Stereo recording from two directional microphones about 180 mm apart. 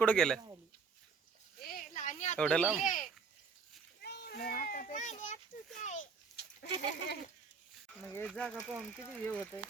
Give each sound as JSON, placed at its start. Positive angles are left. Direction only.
{"t": 0.0, "sound": "speech", "side_deg": 5}
{"t": 1.6, "sound": "a sound", "side_deg": 50}
{"t": 2.4, "sound": "speech", "side_deg": 5}
{"t": 2.7, "sound": "speech", "side_deg": 45}
{"t": 4.0, "sound": "children playing", "side_deg": 60}
{"t": 5.8, "sound": "speech", "side_deg": 45}
{"t": 6.7, "sound": "goat", "side_deg": -30}
{"t": 8.0, "sound": "speech", "side_deg": 10}